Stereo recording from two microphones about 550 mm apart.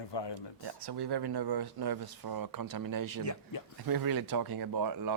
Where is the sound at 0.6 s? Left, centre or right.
Right.